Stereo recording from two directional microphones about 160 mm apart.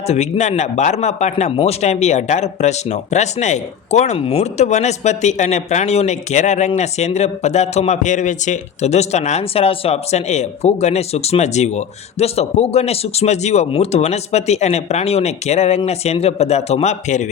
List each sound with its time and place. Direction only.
0.1 s a man's voice: 45° left (ahead or behind)